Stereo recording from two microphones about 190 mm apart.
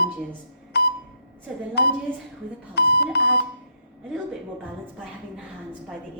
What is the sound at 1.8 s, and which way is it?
A woman's voice, 60° left (ahead or behind).